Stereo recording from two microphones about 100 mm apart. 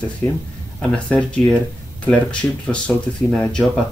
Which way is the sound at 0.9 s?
10° left (ahead or behind).